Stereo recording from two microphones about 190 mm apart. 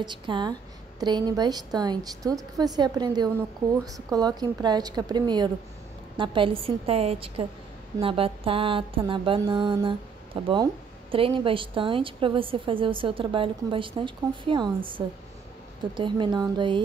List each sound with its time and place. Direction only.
0.0 s mantra: 25° right (ahead or behind)